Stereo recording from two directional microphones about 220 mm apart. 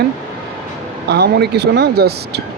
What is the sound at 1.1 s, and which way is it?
Speech, 50° right (ahead or behind).